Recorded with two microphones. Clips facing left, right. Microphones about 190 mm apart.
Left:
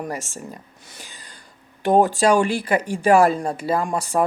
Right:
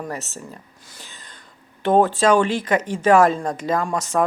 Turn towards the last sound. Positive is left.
turn(degrees=20)  # may be behind; listen again after turning